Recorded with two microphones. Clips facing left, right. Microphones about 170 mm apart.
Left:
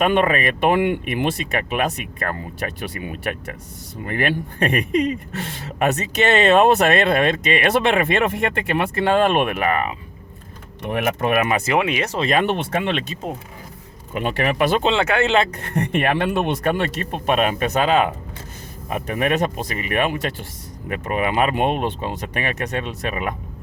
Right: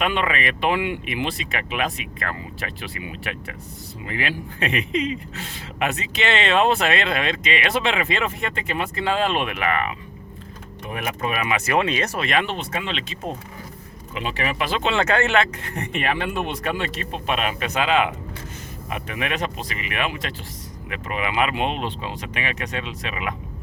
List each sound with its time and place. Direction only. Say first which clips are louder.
0.0 s speech: left 6 dB; 45° left (ahead or behind)
4.0 s speech: left 6 dB; 55° left (ahead or behind)
5.8 s speech: left 5 dB; 45° left (ahead or behind)
10.8 s speech: left 6 dB; 65° left (ahead or behind)
11.6 s speech: left 2 dB; 15° left (ahead or behind)
12.2 s speech: left 5 dB; 40° left (ahead or behind)
12.5 s speech: left 7 dB; 55° left (ahead or behind)
14.1 s speech: left 5 dB; 50° left (ahead or behind)
14.8 s speech: left 2 dB; 15° left (ahead or behind)
15.9 s speech: left 4 dB; 55° left (ahead or behind)